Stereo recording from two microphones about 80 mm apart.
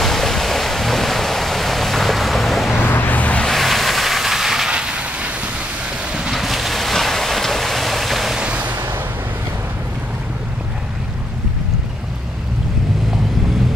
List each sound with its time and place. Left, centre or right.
0.0 s waves: centre
2.8 s vehicle: left
3.4 s vehicle: centre
6.1 s waves: centre
8.4 s a sound: centre